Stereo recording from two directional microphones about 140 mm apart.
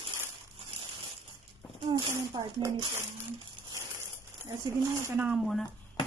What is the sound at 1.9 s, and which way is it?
Speech, 30° right (ahead or behind).